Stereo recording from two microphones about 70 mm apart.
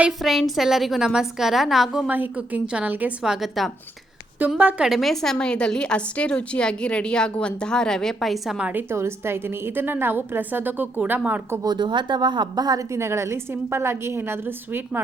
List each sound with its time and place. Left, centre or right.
0.2 s a woman's voice: centre
2.0 s a woman's voice: right
3.2 s a woman's voice: centre
4.4 s a woman's voice: right
4.8 s a woman's voice: centre
8.7 s a woman's voice: right
11.6 s speech: right
12.9 s a woman's voice: right